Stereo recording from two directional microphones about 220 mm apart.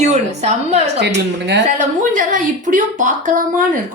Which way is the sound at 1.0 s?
50° right (ahead or behind).